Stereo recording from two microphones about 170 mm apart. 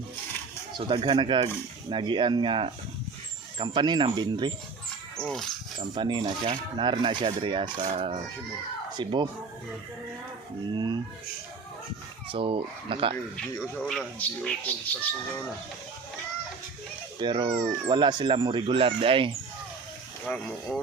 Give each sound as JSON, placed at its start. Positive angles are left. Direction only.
{"t": 0.8, "sound": "speech", "side_deg": -30}
{"t": 5.1, "sound": "speech", "side_deg": 0}
{"t": 5.7, "sound": "speech", "side_deg": -25}
{"t": 10.8, "sound": "speech", "side_deg": -25}
{"t": 12.3, "sound": "speech", "side_deg": -30}
{"t": 13.3, "sound": "speech", "side_deg": 5}
{"t": 17.2, "sound": "speech", "side_deg": -25}
{"t": 20.2, "sound": "speech", "side_deg": 10}